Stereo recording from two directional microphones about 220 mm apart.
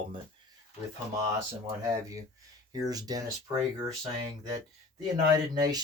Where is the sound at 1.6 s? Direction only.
15° right (ahead or behind).